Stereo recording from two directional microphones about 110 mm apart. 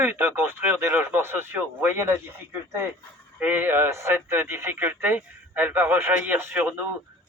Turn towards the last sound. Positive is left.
turn(degrees=-20)  # may be behind; listen again after turning